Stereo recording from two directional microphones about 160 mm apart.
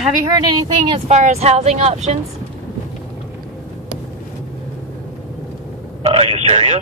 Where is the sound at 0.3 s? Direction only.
25° right (ahead or behind).